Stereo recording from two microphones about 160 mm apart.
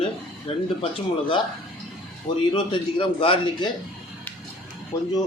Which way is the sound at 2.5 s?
30° left (ahead or behind).